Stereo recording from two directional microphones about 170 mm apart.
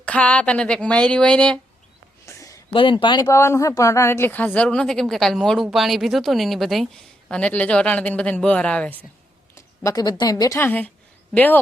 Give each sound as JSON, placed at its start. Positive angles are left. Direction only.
{"t": 0.0, "sound": "speech", "side_deg": 5}
{"t": 2.2, "sound": "a sound", "side_deg": 20}
{"t": 3.2, "sound": "a woman's voice", "side_deg": 15}
{"t": 9.6, "sound": "a woman's voice", "side_deg": 20}